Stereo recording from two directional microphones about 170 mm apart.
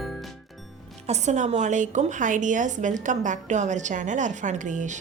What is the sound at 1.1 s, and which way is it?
A woman's voice, 40° right (ahead or behind).